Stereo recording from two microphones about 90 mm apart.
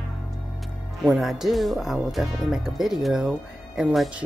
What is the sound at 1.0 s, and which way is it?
Speech, centre (ahead or behind).